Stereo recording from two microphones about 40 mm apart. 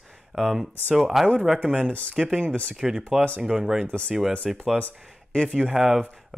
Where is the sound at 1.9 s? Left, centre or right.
Left.